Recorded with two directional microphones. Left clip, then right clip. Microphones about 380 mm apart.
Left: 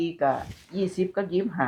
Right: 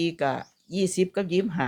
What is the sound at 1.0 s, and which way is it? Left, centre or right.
Speech, right.